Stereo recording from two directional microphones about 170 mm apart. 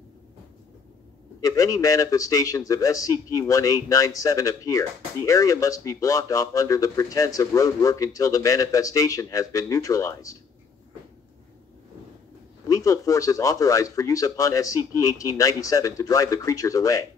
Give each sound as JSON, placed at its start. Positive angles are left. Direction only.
{"t": 1.4, "sound": "a man's voice", "side_deg": 20}
{"t": 12.6, "sound": "a man's voice", "side_deg": 20}